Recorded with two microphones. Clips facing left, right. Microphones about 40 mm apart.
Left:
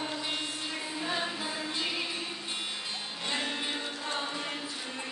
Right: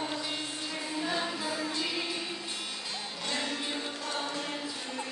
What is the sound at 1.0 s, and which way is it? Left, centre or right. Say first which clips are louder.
Music: even; left.